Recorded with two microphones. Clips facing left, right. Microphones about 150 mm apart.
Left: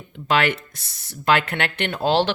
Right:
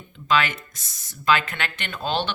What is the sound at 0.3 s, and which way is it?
Speech, 65° left (ahead or behind).